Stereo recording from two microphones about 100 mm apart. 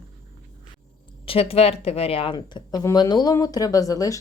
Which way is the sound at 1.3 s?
75° left (ahead or behind).